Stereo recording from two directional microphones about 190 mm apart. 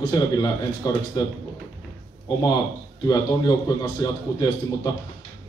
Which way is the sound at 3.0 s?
20° left (ahead or behind).